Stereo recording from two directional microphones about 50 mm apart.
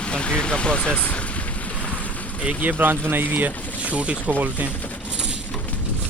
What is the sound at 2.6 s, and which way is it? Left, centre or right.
Speech, right.